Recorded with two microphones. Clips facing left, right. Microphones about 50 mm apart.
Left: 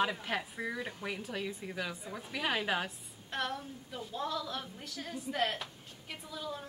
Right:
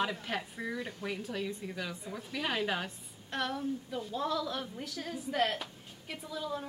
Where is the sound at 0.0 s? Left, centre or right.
Centre.